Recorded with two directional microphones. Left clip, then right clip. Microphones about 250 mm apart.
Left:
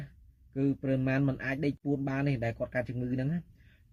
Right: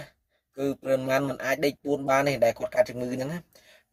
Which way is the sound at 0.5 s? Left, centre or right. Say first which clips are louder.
Right 5 dB; centre.